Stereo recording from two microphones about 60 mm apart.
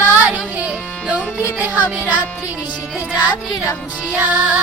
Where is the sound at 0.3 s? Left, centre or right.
Right.